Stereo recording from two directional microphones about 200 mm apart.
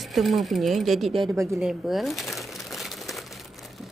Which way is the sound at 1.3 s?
15° right (ahead or behind).